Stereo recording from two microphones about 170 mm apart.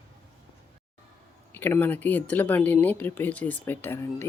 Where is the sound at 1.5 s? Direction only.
10° left (ahead or behind).